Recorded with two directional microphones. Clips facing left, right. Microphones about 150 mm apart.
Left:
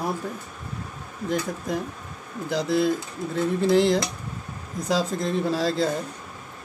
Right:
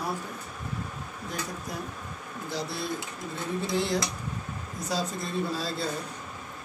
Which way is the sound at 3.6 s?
90° left.